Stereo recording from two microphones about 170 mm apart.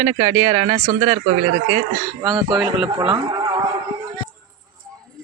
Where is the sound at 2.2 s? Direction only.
25° right (ahead or behind).